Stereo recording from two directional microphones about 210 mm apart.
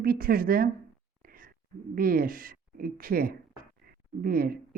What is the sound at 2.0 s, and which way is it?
Speech, 45° right (ahead or behind).